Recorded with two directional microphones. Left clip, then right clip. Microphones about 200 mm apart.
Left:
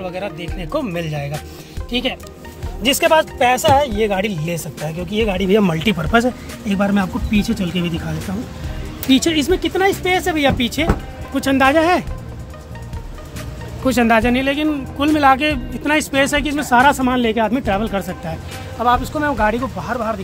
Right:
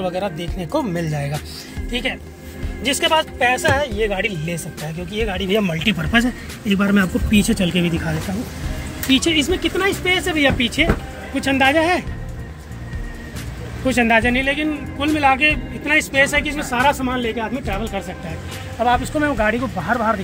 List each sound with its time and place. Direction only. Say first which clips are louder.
0.0 s speech: right 2 dB; 20° right (ahead or behind)
1.9 s speech: left 2 dB; 15° left (ahead or behind)
2.9 s speech: left 4 dB; 30° left (ahead or behind)
5.1 s speech: left 4 dB; 35° left (ahead or behind)
6.7 s speech: right 1 dB; 15° left (ahead or behind)
9.1 s speech: left 1 dB; 40° left (ahead or behind)
13.8 s speech: left 1 dB; 30° left (ahead or behind)
18.8 s speech: left 1 dB; 10° left (ahead or behind)
19.9 s speech: right 4 dB; 25° right (ahead or behind)